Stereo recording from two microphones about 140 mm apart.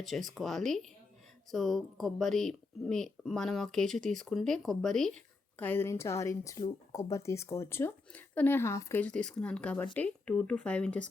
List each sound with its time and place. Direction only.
0.0 s speech: centre (ahead or behind)
5.5 s speech: 15° left (ahead or behind)